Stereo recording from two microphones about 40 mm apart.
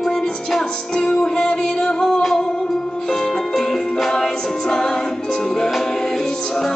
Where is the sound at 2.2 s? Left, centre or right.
Centre.